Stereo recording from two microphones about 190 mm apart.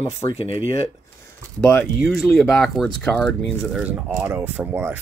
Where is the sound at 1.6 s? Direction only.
5° left (ahead or behind).